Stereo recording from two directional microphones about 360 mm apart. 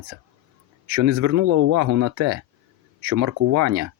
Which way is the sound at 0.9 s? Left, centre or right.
Right.